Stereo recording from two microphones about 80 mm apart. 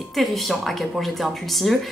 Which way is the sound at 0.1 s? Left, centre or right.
Centre.